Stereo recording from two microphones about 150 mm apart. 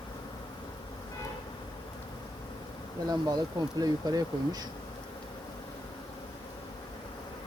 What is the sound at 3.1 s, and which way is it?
Speech, 25° right (ahead or behind).